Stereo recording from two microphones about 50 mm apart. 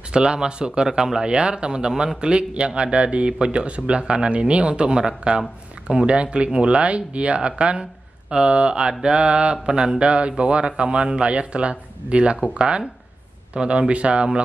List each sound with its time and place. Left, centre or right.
0.1 s a man's voice: centre